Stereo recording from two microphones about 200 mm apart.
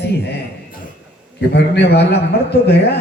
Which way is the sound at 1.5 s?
55° left (ahead or behind).